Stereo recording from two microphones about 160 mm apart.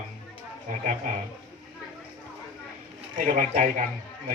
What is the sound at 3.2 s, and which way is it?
Speech, 50° right (ahead or behind).